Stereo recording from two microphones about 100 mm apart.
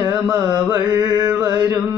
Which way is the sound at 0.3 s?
30° right (ahead or behind).